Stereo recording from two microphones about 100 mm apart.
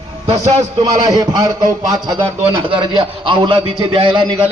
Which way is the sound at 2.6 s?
55° right (ahead or behind).